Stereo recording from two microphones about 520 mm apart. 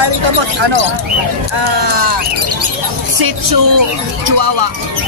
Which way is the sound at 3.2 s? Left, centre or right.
Right.